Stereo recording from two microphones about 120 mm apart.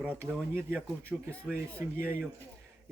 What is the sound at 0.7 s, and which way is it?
Speech, 10° left (ahead or behind).